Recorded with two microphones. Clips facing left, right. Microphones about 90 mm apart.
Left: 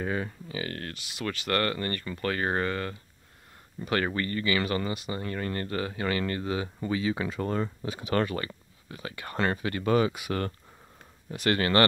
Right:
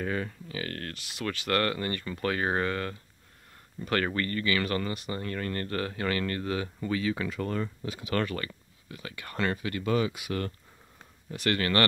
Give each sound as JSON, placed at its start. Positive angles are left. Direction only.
{"t": 0.0, "sound": "speech", "side_deg": 15}
{"t": 11.4, "sound": "speech", "side_deg": 25}